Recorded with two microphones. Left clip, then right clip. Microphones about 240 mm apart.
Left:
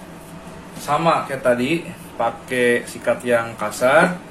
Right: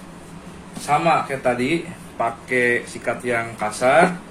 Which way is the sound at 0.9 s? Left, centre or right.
Left.